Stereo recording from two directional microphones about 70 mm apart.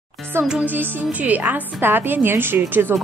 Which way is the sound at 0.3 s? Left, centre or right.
Right.